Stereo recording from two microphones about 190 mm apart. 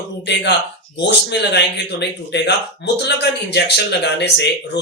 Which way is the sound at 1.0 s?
65° left (ahead or behind).